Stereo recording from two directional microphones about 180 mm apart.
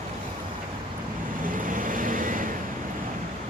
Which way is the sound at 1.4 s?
50° right (ahead or behind).